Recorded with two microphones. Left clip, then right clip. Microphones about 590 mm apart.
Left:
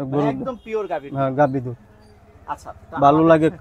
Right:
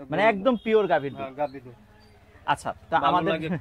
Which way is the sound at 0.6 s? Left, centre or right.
Right.